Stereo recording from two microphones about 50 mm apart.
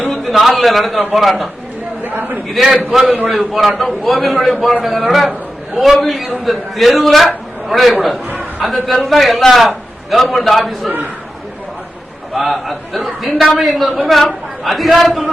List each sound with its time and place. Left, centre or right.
0.1 s a man's voice: centre
2.0 s a sound: right
2.5 s a man's voice: centre
12.3 s a man's voice: centre